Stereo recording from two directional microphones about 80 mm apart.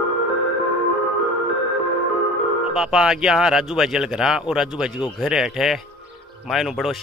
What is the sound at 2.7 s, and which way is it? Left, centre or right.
Speech, centre.